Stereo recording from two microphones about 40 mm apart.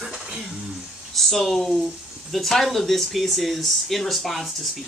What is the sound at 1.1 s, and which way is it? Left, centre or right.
Speech, centre.